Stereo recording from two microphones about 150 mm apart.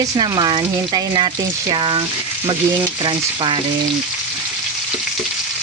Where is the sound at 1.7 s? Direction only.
30° right (ahead or behind).